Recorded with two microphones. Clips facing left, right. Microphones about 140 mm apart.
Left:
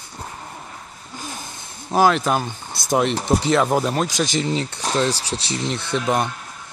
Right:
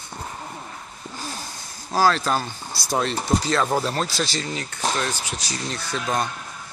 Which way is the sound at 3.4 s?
15° left (ahead or behind).